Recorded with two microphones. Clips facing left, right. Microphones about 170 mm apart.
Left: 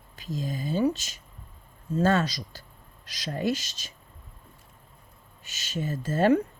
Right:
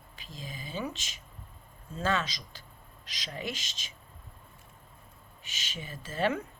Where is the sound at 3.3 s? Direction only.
45° left (ahead or behind).